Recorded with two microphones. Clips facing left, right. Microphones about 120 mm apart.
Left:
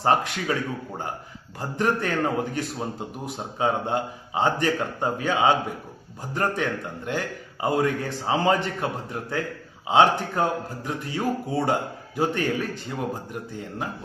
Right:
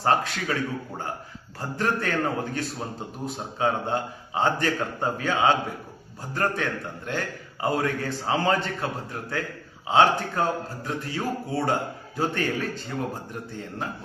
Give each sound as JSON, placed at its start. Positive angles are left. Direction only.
{"t": 0.0, "sound": "a man's voice", "side_deg": 20}
{"t": 1.5, "sound": "a man's voice", "side_deg": 15}